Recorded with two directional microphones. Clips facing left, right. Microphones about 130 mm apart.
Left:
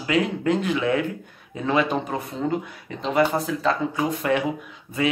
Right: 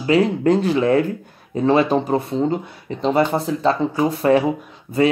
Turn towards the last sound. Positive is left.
turn(degrees=-35)  # may be behind; listen again after turning